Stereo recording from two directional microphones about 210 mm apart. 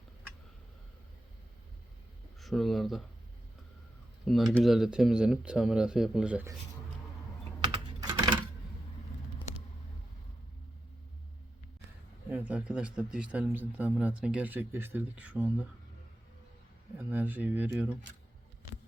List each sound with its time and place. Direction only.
2.4 s speech: centre (ahead or behind)
4.3 s speech: centre (ahead or behind)
7.6 s typing: 20° right (ahead or behind)
12.3 s speech: 5° right (ahead or behind)
17.1 s speech: 10° right (ahead or behind)